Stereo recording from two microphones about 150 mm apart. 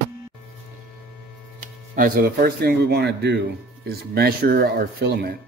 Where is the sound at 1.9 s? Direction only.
70° right (ahead or behind); by 5.3 s 90° right.